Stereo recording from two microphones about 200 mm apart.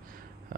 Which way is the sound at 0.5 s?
45° right (ahead or behind).